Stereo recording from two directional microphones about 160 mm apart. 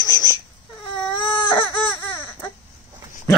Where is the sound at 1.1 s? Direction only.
30° left (ahead or behind).